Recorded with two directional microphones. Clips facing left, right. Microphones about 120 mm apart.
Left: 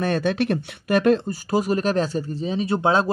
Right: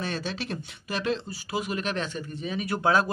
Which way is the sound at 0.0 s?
55° left (ahead or behind).